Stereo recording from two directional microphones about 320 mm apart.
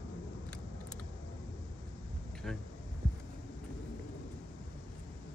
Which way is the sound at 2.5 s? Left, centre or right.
Centre.